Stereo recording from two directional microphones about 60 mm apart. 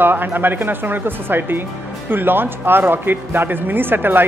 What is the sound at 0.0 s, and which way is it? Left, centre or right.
Speech, right.